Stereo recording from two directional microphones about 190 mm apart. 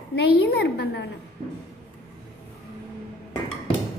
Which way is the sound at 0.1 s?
60° left (ahead or behind).